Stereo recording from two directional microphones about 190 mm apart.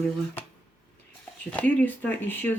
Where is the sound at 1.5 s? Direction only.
10° left (ahead or behind).